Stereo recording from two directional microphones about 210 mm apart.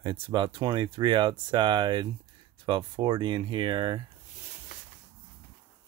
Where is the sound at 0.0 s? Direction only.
20° right (ahead or behind).